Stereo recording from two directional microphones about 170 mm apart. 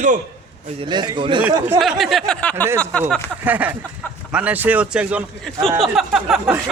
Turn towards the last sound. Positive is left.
turn(degrees=0)  # may be behind; listen again after turning